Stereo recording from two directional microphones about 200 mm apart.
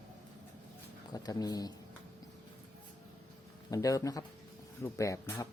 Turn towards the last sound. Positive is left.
turn(degrees=15)  # may be behind; listen again after turning